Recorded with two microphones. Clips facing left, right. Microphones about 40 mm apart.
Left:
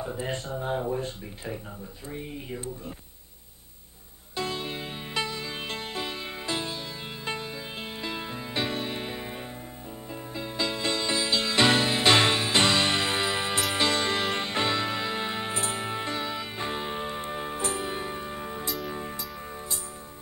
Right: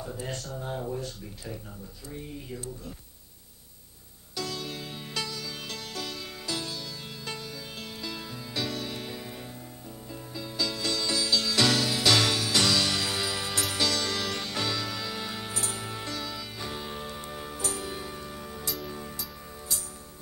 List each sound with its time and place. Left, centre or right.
0.0 s speech: left
4.4 s music: left